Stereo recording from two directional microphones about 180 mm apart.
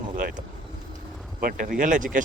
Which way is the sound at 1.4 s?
50° right (ahead or behind).